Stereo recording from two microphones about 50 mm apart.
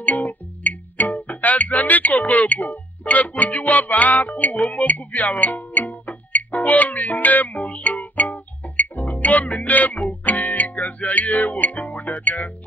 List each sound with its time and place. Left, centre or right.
0.0 s music: left